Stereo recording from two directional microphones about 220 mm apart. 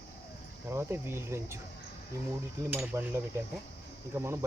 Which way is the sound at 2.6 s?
10° right (ahead or behind).